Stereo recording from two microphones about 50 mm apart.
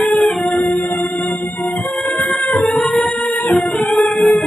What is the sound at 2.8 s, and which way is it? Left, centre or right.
Music, centre.